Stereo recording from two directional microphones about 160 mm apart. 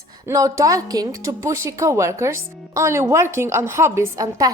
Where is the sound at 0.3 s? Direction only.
20° right (ahead or behind).